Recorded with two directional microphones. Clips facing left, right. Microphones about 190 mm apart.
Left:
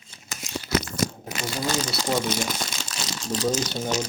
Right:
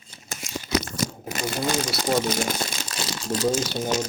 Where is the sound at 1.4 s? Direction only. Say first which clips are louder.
Right 2 dB; 55° right (ahead or behind).